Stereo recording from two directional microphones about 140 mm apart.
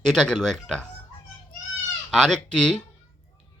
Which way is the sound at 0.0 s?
5° left (ahead or behind).